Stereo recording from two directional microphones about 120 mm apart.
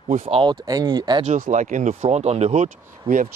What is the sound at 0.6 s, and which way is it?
Speech, 30° right (ahead or behind).